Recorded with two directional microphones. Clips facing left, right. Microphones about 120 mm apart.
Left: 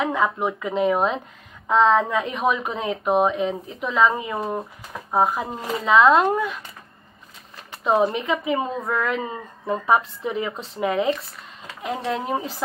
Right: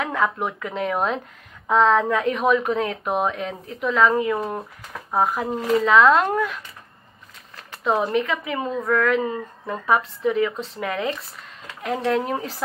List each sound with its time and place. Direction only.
0.0 s speech: 15° left (ahead or behind)
0.9 s speech: centre (ahead or behind)
5.2 s speech: centre (ahead or behind)
7.7 s a sound: 10° left (ahead or behind)
8.2 s a woman's voice: 20° left (ahead or behind)
11.8 s speech: 5° left (ahead or behind)